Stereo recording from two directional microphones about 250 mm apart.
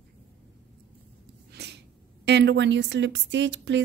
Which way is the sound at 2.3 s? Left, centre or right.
Right.